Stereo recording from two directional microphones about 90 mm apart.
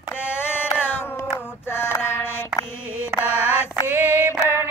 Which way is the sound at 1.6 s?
25° left (ahead or behind).